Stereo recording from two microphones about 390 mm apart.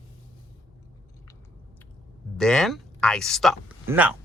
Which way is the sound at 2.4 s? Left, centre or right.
Centre.